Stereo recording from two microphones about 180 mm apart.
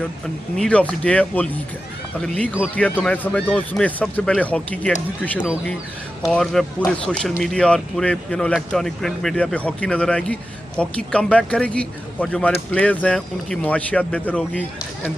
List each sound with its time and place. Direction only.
0.6 s speech: 5° left (ahead or behind)
6.2 s speech: centre (ahead or behind)